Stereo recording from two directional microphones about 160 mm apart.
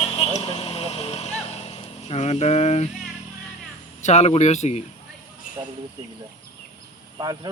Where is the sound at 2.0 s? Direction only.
40° left (ahead or behind).